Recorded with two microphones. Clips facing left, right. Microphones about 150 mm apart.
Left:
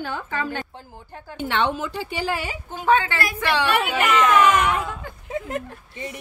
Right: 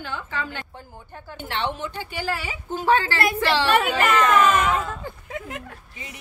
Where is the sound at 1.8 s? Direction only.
90° left.